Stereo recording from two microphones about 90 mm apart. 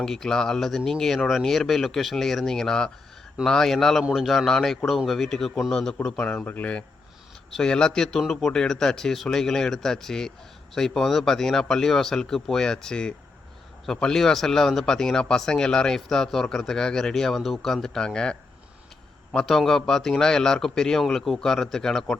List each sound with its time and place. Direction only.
0.0 s speech: 5° left (ahead or behind)